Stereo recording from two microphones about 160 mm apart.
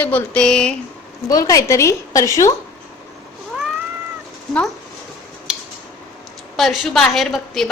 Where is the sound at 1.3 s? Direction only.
20° left (ahead or behind).